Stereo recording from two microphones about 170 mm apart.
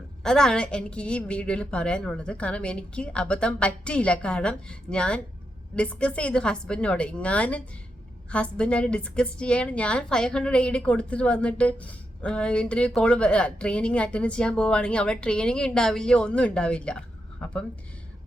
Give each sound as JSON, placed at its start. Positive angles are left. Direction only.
{"t": 0.2, "sound": "a woman's voice", "side_deg": 5}